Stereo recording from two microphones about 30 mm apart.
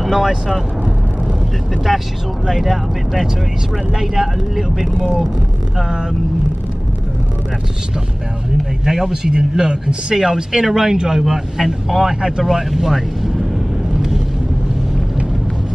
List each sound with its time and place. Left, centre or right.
0.1 s speech: centre
1.9 s speech: centre
2.4 s speech: centre
5.8 s speech: right
8.8 s speech: centre
12.2 s speech: right
12.4 s speech: centre